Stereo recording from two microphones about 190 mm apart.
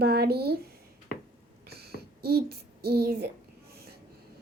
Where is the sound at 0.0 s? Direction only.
55° right (ahead or behind).